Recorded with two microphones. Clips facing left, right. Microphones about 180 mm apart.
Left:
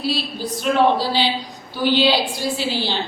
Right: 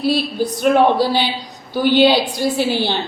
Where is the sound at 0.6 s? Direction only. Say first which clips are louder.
Right 4 dB; 55° right (ahead or behind).